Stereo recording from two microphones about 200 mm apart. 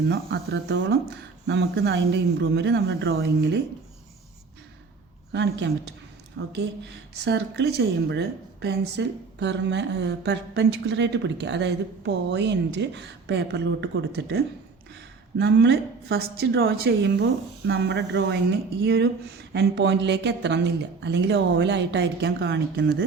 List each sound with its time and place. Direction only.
0.1 s a woman's voice: 55° right (ahead or behind)
5.3 s a woman's voice: 60° right (ahead or behind)
6.4 s speech: 70° right (ahead or behind)
7.3 s a woman's voice: 55° right (ahead or behind)